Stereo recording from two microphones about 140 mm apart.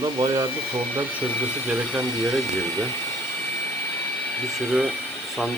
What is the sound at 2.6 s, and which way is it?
Speech, 20° left (ahead or behind).